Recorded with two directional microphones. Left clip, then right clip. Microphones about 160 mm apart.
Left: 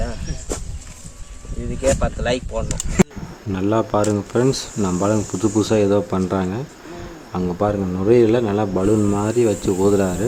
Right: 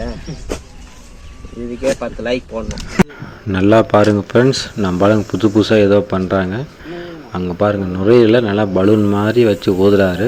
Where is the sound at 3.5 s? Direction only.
20° right (ahead or behind).